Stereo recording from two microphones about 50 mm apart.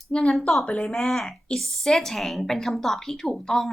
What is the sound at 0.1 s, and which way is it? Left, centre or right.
Speech, left.